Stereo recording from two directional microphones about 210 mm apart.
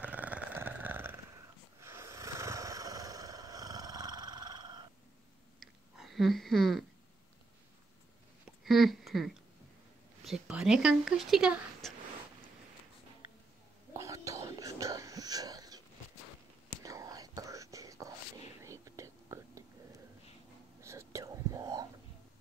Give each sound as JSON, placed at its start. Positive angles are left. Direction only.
{"t": 0.0, "sound": "a sound", "side_deg": -5}
{"t": 1.8, "sound": "snoring", "side_deg": -10}
{"t": 5.6, "sound": "a sound", "side_deg": 0}
{"t": 8.6, "sound": "speech", "side_deg": 0}
{"t": 13.9, "sound": "whispering", "side_deg": -15}
{"t": 16.8, "sound": "whispering", "side_deg": -15}